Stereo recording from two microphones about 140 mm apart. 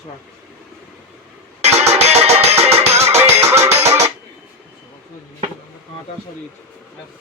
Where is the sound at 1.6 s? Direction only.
50° right (ahead or behind).